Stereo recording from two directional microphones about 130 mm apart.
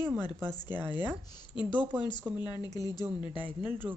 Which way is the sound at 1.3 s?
35° left (ahead or behind).